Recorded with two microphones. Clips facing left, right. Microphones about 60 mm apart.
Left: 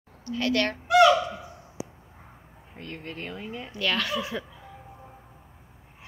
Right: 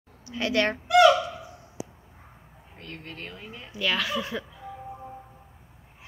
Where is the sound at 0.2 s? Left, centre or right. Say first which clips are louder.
Even; centre.